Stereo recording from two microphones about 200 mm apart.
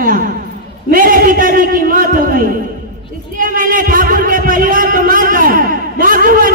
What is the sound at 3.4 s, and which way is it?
Music, 45° right (ahead or behind).